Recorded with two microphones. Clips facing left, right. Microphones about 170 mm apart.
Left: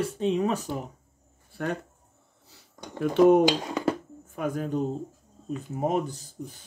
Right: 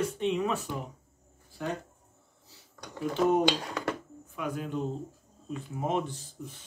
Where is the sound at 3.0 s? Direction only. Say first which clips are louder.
Left 8 dB; 60° left (ahead or behind).